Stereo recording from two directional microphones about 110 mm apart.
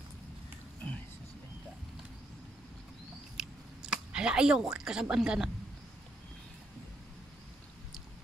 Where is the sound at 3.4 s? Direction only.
5° right (ahead or behind).